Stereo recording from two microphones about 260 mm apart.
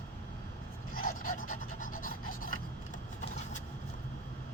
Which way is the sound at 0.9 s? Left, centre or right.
Left.